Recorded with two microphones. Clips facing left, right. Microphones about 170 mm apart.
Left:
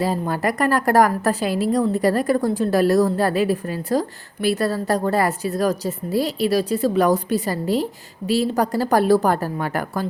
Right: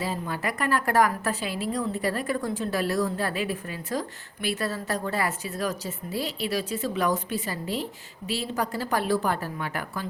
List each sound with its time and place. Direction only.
0.0 s a woman's voice: 40° left (ahead or behind)